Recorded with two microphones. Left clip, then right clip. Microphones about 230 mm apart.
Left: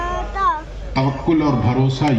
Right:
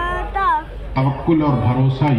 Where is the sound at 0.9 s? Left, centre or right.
Left.